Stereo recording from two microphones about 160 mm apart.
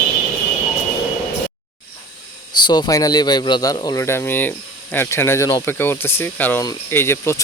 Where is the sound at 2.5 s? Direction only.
25° left (ahead or behind).